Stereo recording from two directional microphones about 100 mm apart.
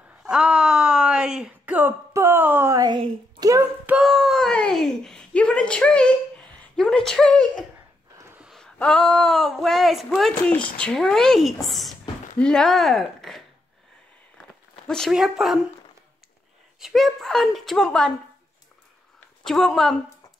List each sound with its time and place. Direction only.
0.2 s a sound: 5° right (ahead or behind)
2.1 s speech: 25° right (ahead or behind)
2.7 s a woman's voice: 40° right (ahead or behind)
4.0 s a sound: centre (ahead or behind)
8.7 s a woman's voice: 10° left (ahead or behind)
14.9 s a woman's voice: 5° left (ahead or behind)
16.8 s a woman's voice: centre (ahead or behind)
19.1 s a woman's voice: 5° left (ahead or behind)